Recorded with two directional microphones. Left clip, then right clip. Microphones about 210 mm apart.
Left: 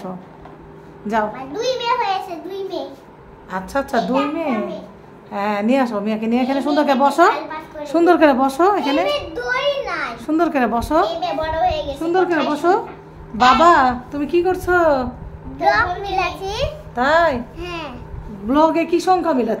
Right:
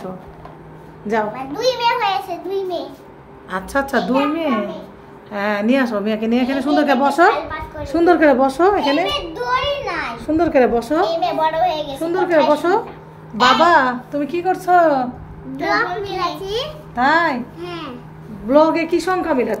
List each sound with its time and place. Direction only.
1.3 s a woman's voice: 5° right (ahead or behind)
3.4 s a woman's voice: 5° right (ahead or behind); by 9.0 s 20° left (ahead or behind)
9.5 s a sound: 5° left (ahead or behind)
10.2 s a woman's voice: 25° left (ahead or behind)
15.7 s a child's voice: 40° left (ahead or behind)
16.9 s a woman's voice: 10° left (ahead or behind)
17.6 s a child's voice: 40° left (ahead or behind)
18.5 s a woman's voice: 10° left (ahead or behind)